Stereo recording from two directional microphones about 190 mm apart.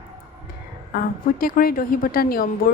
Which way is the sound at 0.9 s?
50° left (ahead or behind).